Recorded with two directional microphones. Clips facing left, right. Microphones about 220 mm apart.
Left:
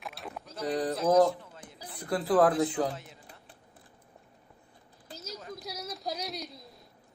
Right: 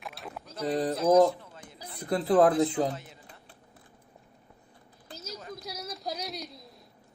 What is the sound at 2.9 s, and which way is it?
Speech, centre (ahead or behind).